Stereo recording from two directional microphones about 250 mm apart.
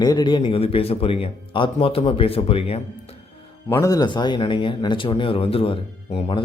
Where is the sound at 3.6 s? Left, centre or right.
Centre.